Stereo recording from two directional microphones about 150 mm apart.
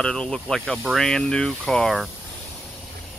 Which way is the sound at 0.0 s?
5° left (ahead or behind).